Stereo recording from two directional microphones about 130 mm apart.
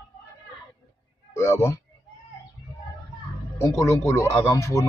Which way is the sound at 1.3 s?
20° left (ahead or behind).